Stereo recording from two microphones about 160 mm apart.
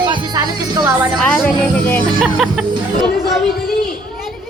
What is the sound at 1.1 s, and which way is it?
Speech, 5° left (ahead or behind).